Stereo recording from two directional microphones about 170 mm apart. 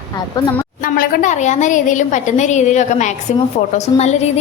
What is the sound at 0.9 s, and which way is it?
A woman's voice, 55° left (ahead or behind).